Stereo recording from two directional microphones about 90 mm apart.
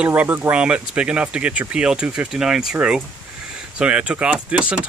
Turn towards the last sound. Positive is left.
turn(degrees=-15)  # may be behind; listen again after turning